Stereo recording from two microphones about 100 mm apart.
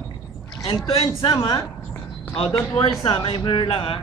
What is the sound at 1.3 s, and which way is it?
Speech, 45° left (ahead or behind).